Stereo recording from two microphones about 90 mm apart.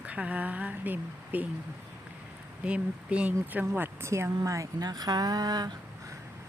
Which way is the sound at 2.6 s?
15° right (ahead or behind).